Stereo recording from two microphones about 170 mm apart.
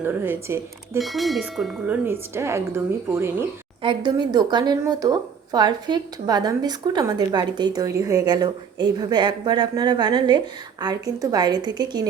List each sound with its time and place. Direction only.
0.0 s a woman's voice: 10° right (ahead or behind)
0.9 s speech: centre (ahead or behind)
2.0 s a woman's voice: 15° right (ahead or behind)
3.8 s speech: 25° right (ahead or behind)